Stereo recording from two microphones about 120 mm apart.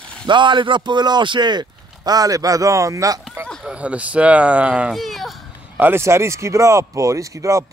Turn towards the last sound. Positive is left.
turn(degrees=-25)  # may be behind; listen again after turning